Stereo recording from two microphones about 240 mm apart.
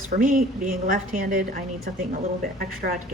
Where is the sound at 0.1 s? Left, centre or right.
Right.